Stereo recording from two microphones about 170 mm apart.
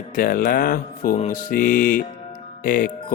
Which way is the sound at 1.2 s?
50° left (ahead or behind).